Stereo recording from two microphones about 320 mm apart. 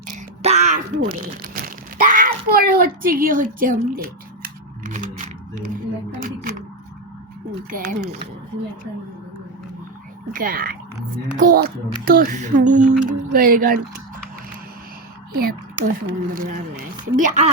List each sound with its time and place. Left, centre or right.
0.4 s speech: centre
1.6 s a sound: right
7.7 s speech: right
10.3 s speech: right
15.4 s speech: right